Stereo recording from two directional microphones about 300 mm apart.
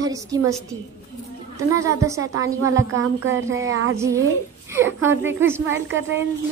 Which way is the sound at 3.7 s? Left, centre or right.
Right.